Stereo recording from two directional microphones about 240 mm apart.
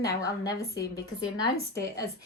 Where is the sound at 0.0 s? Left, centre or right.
Centre.